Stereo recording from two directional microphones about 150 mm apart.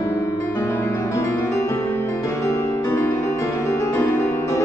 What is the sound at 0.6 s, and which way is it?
Music, 15° left (ahead or behind).